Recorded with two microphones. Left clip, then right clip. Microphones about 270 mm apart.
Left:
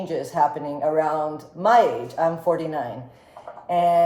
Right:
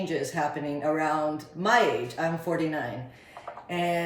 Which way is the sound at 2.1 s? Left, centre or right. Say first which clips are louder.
Left 8 dB; left.